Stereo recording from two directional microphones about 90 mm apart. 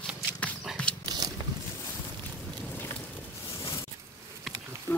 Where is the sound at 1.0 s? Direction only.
50° right (ahead or behind).